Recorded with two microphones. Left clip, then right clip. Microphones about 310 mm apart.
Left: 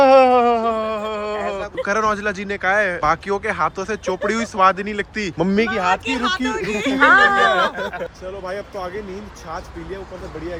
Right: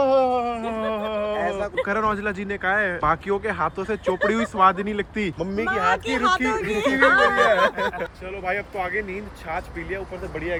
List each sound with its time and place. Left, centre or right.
0.0 s a sound: left
0.6 s a sound: centre
1.7 s speech: centre
5.4 s speech: left
5.7 s speech: centre
6.1 s speech: right
6.6 s speech: centre
7.6 s speech: right